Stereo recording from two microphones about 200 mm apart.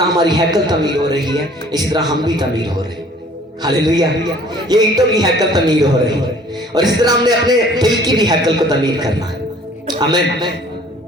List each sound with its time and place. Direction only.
0.2 s a man's voice: 20° right (ahead or behind)